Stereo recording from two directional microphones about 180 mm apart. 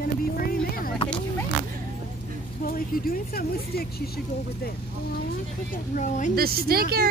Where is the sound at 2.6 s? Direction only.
55° left (ahead or behind).